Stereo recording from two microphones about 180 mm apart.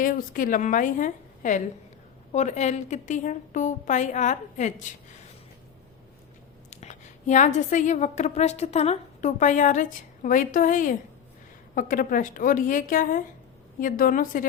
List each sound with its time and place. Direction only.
0.0 s a woman's voice: 50° left (ahead or behind)
6.7 s a woman's voice: 40° left (ahead or behind)